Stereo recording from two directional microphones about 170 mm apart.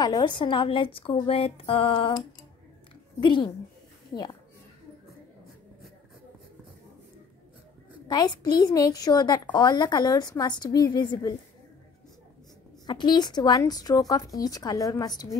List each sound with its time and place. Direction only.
0.0 s a woman's voice: 25° left (ahead or behind)
8.1 s a woman's voice: 25° left (ahead or behind)
12.8 s a woman's voice: 25° left (ahead or behind)